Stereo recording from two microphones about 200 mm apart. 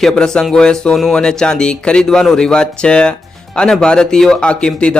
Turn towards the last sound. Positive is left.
turn(degrees=5)  # may be behind; listen again after turning